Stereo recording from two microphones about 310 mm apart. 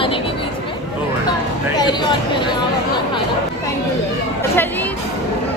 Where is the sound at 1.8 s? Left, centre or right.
Centre.